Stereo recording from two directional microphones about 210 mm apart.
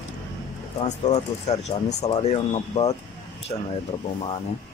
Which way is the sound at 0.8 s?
30° left (ahead or behind).